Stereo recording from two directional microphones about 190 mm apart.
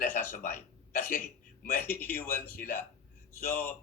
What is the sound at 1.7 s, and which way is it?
Speech, 10° left (ahead or behind).